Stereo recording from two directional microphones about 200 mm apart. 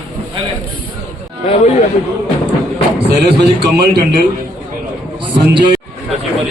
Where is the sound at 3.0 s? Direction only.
55° right (ahead or behind).